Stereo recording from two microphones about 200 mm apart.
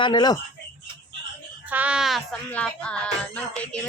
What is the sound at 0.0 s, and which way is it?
Speech, 20° left (ahead or behind).